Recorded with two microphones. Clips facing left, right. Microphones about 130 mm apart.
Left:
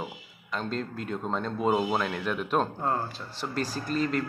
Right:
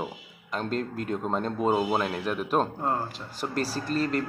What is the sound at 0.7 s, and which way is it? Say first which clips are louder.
Speech: right 5 dB; 50° right (ahead or behind).